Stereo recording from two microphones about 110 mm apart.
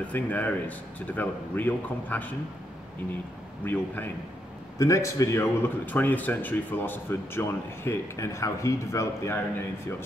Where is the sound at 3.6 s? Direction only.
15° left (ahead or behind).